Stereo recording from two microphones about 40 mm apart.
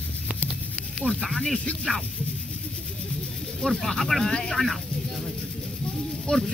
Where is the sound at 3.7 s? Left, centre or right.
Centre.